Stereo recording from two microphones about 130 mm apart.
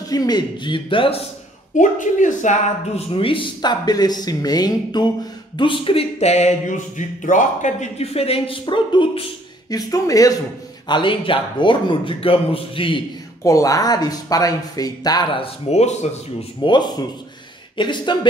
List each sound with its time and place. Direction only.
0.1 s a man's voice: 30° left (ahead or behind)
1.8 s speech: 75° left (ahead or behind)
3.2 s a man's voice: 40° left (ahead or behind)
7.0 s speech: 80° left; by 9.3 s 40° left (ahead or behind)
9.7 s speech: 30° left (ahead or behind)
10.9 s a man's voice: 40° left (ahead or behind)
13.4 s speech: 25° left (ahead or behind)
15.4 s speech: 55° left (ahead or behind)
16.6 s a man's voice: 35° left (ahead or behind)